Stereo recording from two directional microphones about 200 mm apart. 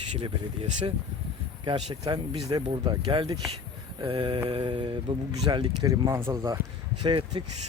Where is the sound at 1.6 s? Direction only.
20° right (ahead or behind).